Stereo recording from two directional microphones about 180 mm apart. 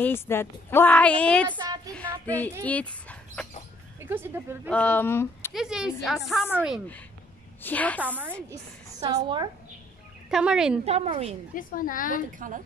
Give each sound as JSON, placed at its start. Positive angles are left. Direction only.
{"t": 0.0, "sound": "a woman's voice", "side_deg": 15}
{"t": 4.0, "sound": "speech", "side_deg": -10}
{"t": 4.6, "sound": "a woman's voice", "side_deg": 5}
{"t": 5.5, "sound": "speech", "side_deg": -5}
{"t": 7.6, "sound": "a woman's voice", "side_deg": 10}
{"t": 9.1, "sound": "a woman's voice", "side_deg": -25}
{"t": 10.3, "sound": "speech", "side_deg": -5}
{"t": 10.9, "sound": "speech", "side_deg": -35}
{"t": 11.5, "sound": "a woman's voice", "side_deg": 50}
{"t": 12.3, "sound": "a woman's voice", "side_deg": -45}